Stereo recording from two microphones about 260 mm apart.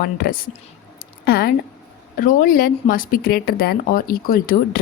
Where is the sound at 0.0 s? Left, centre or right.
Left.